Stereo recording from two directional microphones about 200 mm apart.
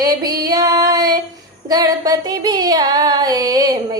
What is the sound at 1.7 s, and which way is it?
Child singing, 20° right (ahead or behind).